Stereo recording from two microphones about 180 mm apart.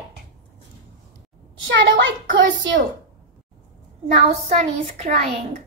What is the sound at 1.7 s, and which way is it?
Child singing, 90° right.